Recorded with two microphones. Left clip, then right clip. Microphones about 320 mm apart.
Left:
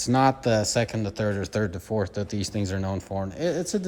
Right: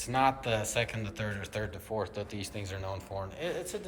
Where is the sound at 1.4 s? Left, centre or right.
Left.